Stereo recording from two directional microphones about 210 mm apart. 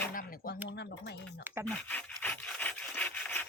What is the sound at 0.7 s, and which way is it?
Speech, 55° left (ahead or behind).